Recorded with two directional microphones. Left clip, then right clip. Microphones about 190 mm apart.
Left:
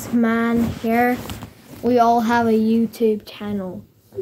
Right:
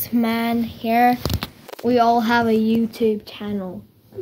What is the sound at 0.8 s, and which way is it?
Speech, 45° right (ahead or behind).